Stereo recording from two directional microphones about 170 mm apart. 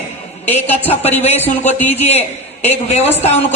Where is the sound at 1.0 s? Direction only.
40° left (ahead or behind).